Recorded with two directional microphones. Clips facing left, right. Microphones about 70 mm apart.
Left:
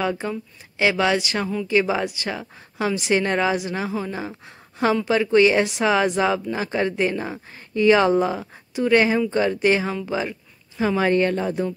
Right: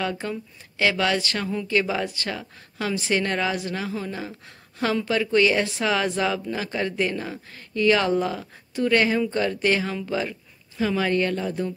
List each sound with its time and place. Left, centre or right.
0.0 s speech: centre